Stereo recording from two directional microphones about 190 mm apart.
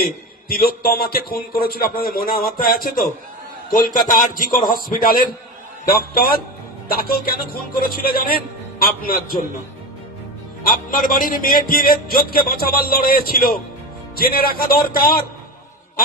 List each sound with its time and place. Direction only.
0.0 s a man's voice: 50° left (ahead or behind)
10.6 s a man's voice: 50° left (ahead or behind)